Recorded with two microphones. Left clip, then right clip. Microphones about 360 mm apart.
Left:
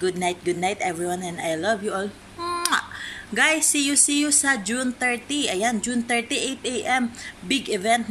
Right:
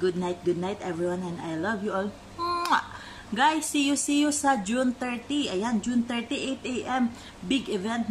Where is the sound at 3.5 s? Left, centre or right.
Centre.